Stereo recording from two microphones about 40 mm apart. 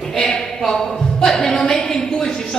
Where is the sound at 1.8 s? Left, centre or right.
Centre.